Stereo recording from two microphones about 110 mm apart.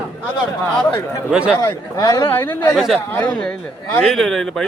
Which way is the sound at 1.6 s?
35° left (ahead or behind).